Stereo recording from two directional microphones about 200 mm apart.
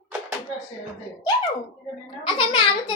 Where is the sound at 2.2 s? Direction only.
25° left (ahead or behind).